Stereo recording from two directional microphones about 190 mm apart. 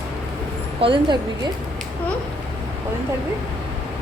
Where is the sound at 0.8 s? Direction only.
25° right (ahead or behind).